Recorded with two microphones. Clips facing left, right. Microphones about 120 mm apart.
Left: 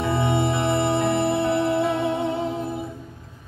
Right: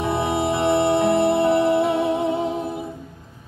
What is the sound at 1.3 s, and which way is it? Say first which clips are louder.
Music: right 4 dB; 15° right (ahead or behind).